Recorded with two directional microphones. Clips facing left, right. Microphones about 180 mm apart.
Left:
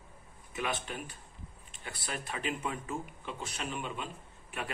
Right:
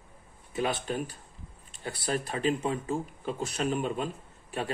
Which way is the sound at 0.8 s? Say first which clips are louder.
Right 9 dB; 35° right (ahead or behind).